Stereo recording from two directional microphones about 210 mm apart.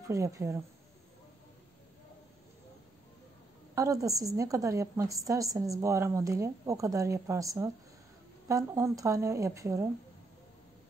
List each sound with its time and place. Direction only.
0.0 s a woman's voice: 15° right (ahead or behind)
3.7 s a woman's voice: 15° right (ahead or behind)